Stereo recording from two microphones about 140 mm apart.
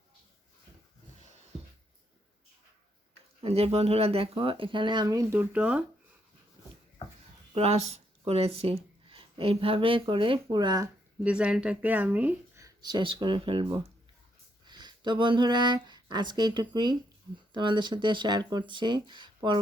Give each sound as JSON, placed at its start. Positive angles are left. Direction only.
{"t": 3.4, "sound": "speech", "side_deg": -45}
{"t": 7.5, "sound": "speech", "side_deg": -50}
{"t": 11.2, "sound": "speech", "side_deg": -5}
{"t": 12.6, "sound": "speech", "side_deg": -30}
{"t": 13.7, "sound": "speech", "side_deg": -20}